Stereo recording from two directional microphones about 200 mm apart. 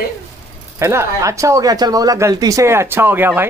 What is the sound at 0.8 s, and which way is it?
Speech, 15° right (ahead or behind).